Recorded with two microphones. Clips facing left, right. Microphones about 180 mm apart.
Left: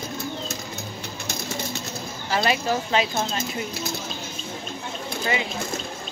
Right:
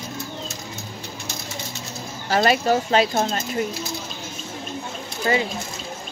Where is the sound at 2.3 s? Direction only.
45° right (ahead or behind).